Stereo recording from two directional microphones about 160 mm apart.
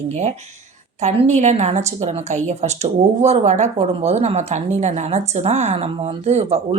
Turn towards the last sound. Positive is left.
turn(degrees=-40)  # may be behind; listen again after turning